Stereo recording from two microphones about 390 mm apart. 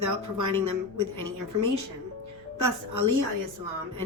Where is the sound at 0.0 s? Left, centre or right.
Right.